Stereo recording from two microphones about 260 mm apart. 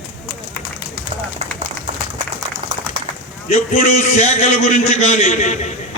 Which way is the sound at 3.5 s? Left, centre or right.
Left.